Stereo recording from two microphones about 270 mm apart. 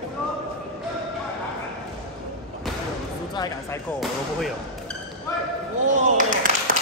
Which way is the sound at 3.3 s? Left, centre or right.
Centre.